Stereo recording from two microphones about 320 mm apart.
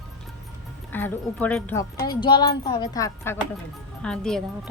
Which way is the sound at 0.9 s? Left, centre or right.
Centre.